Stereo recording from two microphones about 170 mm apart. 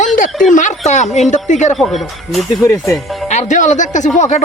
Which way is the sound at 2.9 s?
Centre (ahead or behind).